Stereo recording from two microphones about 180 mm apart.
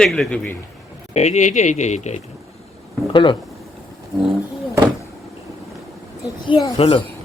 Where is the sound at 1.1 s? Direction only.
40° left (ahead or behind).